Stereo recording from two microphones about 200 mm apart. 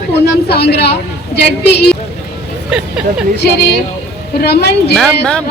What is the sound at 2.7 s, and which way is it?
Speech, 5° right (ahead or behind).